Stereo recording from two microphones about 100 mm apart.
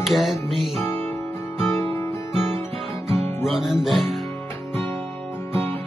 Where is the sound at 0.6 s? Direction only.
Centre (ahead or behind).